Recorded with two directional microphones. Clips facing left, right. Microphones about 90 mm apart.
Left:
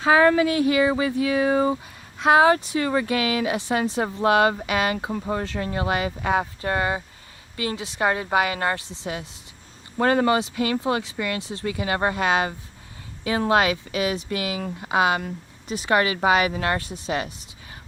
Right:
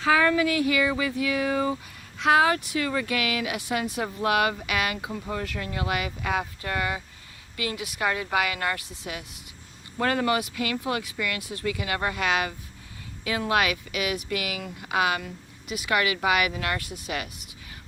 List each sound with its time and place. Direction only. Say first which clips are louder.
0.0 s speech: left 4 dB; 30° left (ahead or behind)